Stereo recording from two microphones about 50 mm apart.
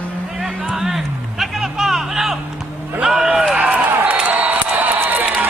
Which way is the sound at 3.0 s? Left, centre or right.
Centre.